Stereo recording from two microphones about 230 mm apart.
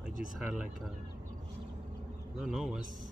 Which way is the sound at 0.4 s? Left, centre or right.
Centre.